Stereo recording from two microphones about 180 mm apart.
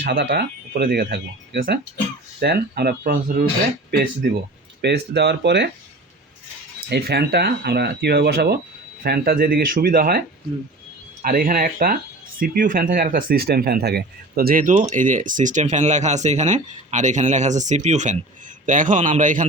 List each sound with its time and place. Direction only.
0.0 s speech: 55° right (ahead or behind)
4.8 s speech: 70° right (ahead or behind)
6.9 s speech: 65° right (ahead or behind); by 19.5 s 45° right (ahead or behind)